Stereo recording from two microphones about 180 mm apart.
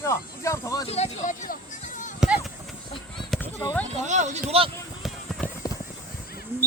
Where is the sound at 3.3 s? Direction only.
10° left (ahead or behind).